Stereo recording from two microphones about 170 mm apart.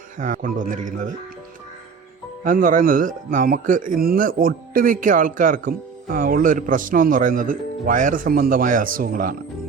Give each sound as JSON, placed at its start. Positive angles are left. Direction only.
{"t": 0.2, "sound": "a man's voice", "side_deg": -50}
{"t": 2.4, "sound": "a man's voice", "side_deg": -50}